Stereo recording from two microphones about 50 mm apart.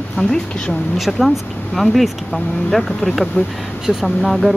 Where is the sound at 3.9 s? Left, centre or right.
Centre.